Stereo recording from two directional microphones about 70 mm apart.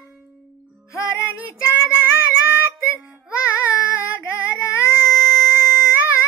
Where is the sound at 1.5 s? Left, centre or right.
Left.